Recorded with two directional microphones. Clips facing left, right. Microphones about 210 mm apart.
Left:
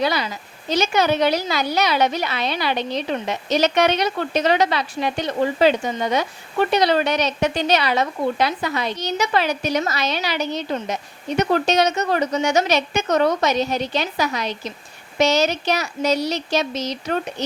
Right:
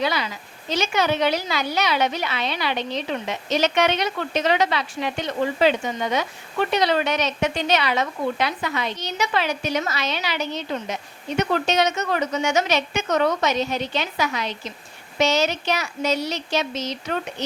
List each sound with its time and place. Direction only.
0.0 s a woman's voice: 40° left (ahead or behind)